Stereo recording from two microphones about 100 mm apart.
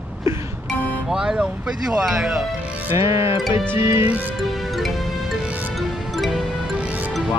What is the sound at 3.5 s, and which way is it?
Music, 25° right (ahead or behind).